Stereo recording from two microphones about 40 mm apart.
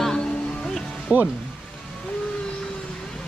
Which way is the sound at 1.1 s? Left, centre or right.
Right.